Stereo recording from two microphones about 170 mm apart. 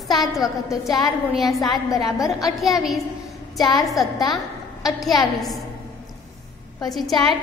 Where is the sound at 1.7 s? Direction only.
20° left (ahead or behind).